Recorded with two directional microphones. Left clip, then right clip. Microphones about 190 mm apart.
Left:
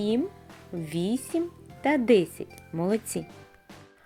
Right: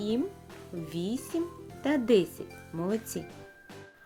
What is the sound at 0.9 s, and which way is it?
Speech, 20° left (ahead or behind).